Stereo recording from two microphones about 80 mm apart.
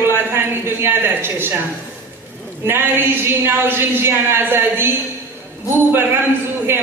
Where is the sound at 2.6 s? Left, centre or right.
Right.